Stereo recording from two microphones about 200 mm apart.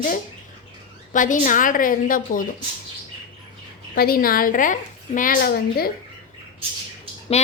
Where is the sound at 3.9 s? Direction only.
50° left (ahead or behind).